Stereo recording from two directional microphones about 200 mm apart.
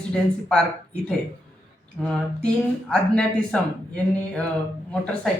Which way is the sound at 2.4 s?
5° left (ahead or behind).